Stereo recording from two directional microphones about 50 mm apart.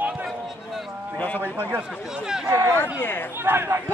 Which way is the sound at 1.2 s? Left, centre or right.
Left.